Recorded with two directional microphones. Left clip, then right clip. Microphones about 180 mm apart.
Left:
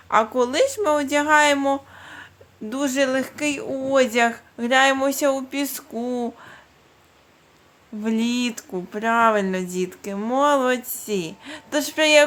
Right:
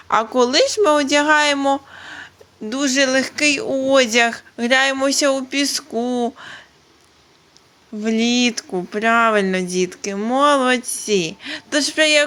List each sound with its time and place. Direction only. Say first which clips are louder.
0.1 s speech: right 3 dB; 20° right (ahead or behind)
8.0 s speech: right 6 dB; 10° right (ahead or behind)